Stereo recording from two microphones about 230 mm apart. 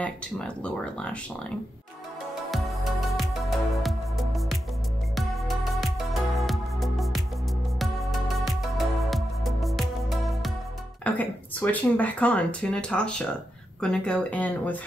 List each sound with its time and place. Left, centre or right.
0.0 s speech: centre
2.5 s music: centre
11.1 s speech: centre